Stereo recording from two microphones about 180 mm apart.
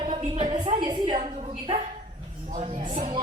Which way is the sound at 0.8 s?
25° right (ahead or behind).